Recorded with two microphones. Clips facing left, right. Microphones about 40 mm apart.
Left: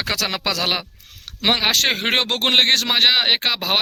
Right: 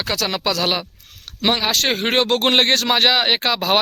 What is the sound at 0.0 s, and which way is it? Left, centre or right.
Speech, left.